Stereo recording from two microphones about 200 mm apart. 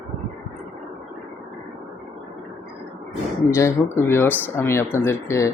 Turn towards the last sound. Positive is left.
turn(degrees=15)  # may be behind; listen again after turning